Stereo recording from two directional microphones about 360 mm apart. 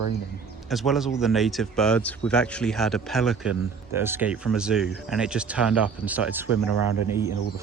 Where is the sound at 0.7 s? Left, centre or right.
Centre.